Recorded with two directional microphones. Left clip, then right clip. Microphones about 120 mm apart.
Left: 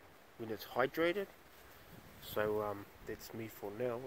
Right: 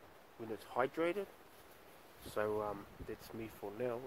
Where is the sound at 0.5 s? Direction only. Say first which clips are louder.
Left 2 dB; 50° left (ahead or behind).